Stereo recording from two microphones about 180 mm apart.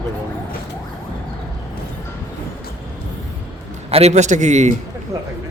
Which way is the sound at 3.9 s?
40° right (ahead or behind).